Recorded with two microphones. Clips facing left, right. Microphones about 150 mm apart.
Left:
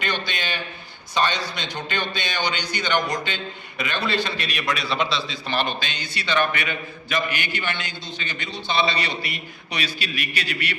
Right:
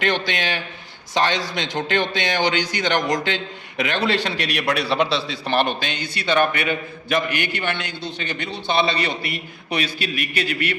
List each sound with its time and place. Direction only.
0.0 s a man's voice: 90° right; by 10.8 s 50° right (ahead or behind)